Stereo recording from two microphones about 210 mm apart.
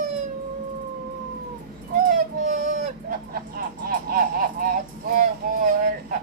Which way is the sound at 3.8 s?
45° right (ahead or behind).